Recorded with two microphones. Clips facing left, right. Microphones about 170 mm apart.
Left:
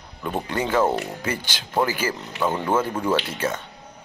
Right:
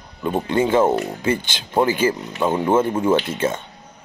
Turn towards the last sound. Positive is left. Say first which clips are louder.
# right 4 dB
turn(degrees=-25)  # may be behind; listen again after turning